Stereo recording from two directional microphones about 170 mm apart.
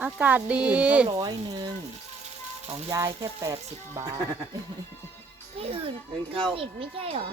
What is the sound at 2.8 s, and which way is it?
Speech, 20° right (ahead or behind).